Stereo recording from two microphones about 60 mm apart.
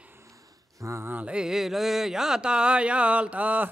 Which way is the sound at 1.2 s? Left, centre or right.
Centre.